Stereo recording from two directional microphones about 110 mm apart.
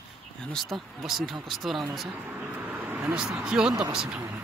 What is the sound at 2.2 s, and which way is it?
Speech, 15° right (ahead or behind).